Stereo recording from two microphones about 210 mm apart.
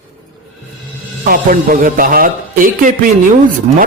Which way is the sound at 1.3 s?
40° right (ahead or behind).